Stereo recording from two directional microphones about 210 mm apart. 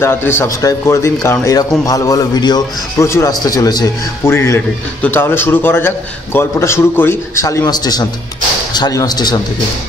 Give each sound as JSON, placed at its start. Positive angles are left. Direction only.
{"t": 0.0, "sound": "speech", "side_deg": 10}